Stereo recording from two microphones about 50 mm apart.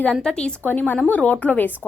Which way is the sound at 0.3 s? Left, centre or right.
Left.